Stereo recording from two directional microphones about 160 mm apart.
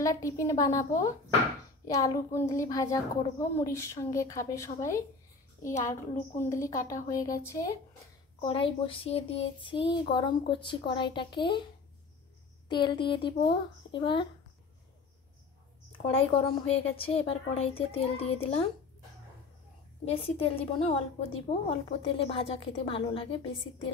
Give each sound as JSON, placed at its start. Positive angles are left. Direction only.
{"t": 0.0, "sound": "a woman's voice", "side_deg": 20}
{"t": 8.4, "sound": "a woman's voice", "side_deg": 35}
{"t": 12.6, "sound": "a woman's voice", "side_deg": 30}
{"t": 16.1, "sound": "a woman's voice", "side_deg": 35}
{"t": 20.1, "sound": "a woman's voice", "side_deg": 35}